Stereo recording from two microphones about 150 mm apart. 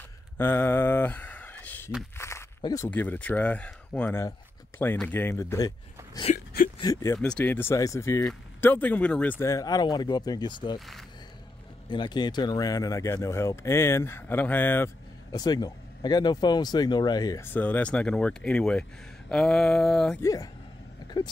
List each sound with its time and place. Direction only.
0.4 s speech: 15° left (ahead or behind)
2.1 s a sound: 20° left (ahead or behind)
2.6 s speech: 25° left (ahead or behind)
2.9 s speech: 10° left (ahead or behind)
6.3 s whimper: 70° left (ahead or behind)
6.8 s speech: 20° left (ahead or behind)
7.2 s speech: 5° left (ahead or behind); by 10.8 s 30° left (ahead or behind)
11.9 s speech: 30° left (ahead or behind); by 14.9 s 10° left (ahead or behind)
15.3 s speech: 25° left (ahead or behind)
17.5 s speech: 10° left (ahead or behind)
20.2 s speech: 20° left (ahead or behind)